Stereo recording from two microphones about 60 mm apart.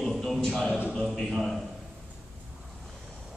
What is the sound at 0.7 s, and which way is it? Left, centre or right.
Speech, centre.